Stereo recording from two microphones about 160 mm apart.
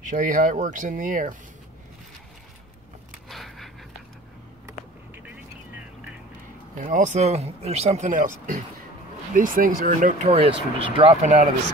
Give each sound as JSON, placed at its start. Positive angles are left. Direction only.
{"t": 0.0, "sound": "speech", "side_deg": -55}
{"t": 3.3, "sound": "a sound", "side_deg": 0}
{"t": 6.8, "sound": "speech", "side_deg": -50}